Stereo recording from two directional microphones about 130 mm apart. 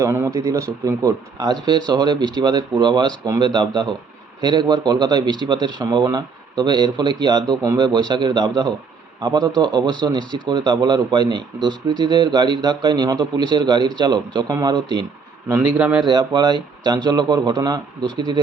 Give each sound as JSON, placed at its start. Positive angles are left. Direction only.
{"t": 0.0, "sound": "a man's voice", "side_deg": -20}
{"t": 15.5, "sound": "a man's voice", "side_deg": -10}
{"t": 16.0, "sound": "a man's voice", "side_deg": -35}